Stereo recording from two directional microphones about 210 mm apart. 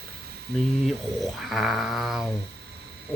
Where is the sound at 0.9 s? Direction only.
Centre (ahead or behind).